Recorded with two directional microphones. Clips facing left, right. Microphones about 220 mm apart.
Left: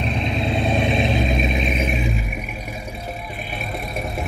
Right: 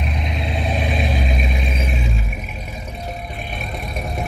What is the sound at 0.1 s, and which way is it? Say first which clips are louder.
Vehicle: left 3 dB; 25° left (ahead or behind).